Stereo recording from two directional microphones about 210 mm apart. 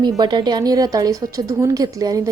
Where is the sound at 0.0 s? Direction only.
20° right (ahead or behind).